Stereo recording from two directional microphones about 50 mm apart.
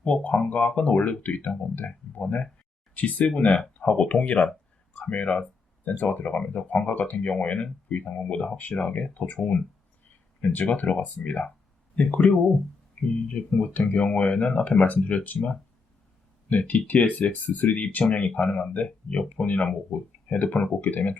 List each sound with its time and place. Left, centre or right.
0.0 s speech: left
16.5 s speech: left